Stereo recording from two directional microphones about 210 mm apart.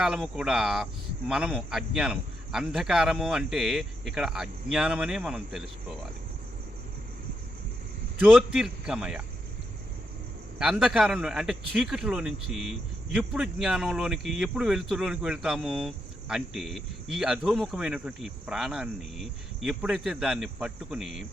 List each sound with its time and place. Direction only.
0.0 s speech: centre (ahead or behind)
8.2 s speech: centre (ahead or behind)
10.6 s speech: 5° right (ahead or behind)